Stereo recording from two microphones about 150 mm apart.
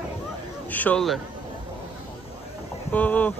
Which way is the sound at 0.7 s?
10° left (ahead or behind).